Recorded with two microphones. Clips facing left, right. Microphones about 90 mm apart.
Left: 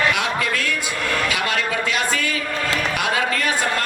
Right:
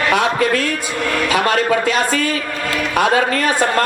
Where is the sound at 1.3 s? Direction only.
40° right (ahead or behind).